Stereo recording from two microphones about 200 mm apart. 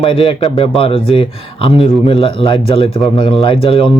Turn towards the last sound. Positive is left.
turn(degrees=25)  # may be behind; listen again after turning